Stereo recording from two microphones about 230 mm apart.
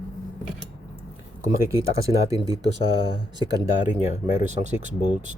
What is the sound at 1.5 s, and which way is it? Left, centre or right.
Speech, centre.